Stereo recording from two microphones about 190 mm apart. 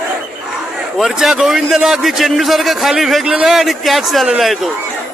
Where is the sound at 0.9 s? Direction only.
Centre (ahead or behind).